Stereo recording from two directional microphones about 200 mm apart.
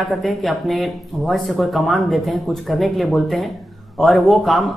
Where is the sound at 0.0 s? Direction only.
Centre (ahead or behind).